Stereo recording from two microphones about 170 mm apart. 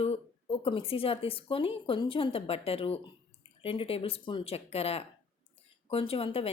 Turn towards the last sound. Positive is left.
turn(degrees=35)  # may be behind; listen again after turning